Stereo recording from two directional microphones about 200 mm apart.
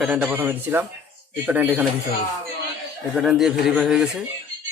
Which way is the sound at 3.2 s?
5° right (ahead or behind).